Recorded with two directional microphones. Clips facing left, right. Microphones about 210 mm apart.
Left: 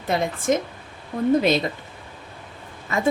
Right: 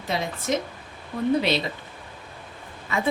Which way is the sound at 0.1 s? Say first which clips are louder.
Left 5 dB; 50° left (ahead or behind).